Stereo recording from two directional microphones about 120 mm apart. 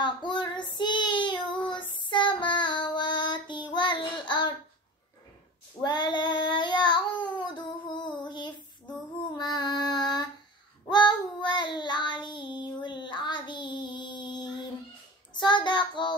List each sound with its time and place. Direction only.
0.0 s child singing: 40° left (ahead or behind)
5.8 s child singing: 40° left (ahead or behind)
9.4 s female singing: 35° left (ahead or behind)
10.9 s child singing: 40° left (ahead or behind)